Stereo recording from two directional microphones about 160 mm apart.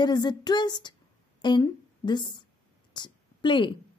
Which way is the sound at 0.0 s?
25° left (ahead or behind).